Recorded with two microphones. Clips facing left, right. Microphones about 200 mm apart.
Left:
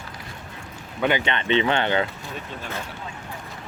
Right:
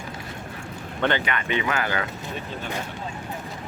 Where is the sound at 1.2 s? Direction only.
25° left (ahead or behind).